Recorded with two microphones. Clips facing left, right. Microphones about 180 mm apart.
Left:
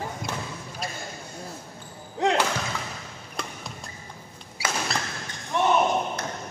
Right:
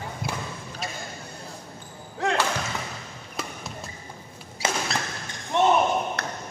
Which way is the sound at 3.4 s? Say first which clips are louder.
Right 1 dB; 5° right (ahead or behind).